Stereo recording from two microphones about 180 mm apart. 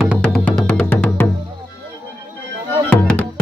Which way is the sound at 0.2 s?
5° left (ahead or behind).